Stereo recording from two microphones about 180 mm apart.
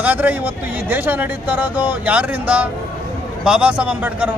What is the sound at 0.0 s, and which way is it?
Speech, 10° right (ahead or behind).